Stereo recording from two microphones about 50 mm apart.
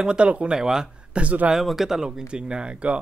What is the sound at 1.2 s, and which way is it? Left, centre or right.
Speech, right.